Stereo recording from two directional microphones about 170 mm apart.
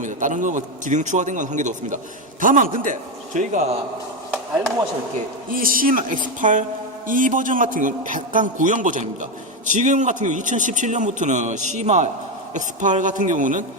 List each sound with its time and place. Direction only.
0.0 s a man's voice: 50° right (ahead or behind)
5.5 s a man's voice: 55° right (ahead or behind)